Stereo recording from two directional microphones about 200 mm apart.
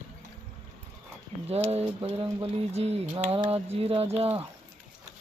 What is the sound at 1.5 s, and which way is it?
Speech, 30° right (ahead or behind).